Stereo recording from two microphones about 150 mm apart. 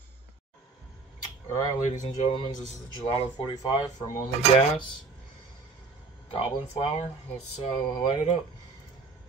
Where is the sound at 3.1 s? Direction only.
30° left (ahead or behind).